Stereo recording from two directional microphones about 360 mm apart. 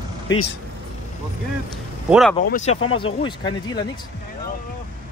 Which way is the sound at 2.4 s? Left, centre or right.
Centre.